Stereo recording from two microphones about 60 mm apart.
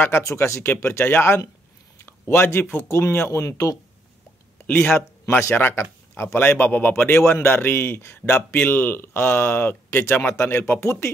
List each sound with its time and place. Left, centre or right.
0.2 s speech: left
3.4 s speech: left
4.6 s speech: left
7.1 s speech: left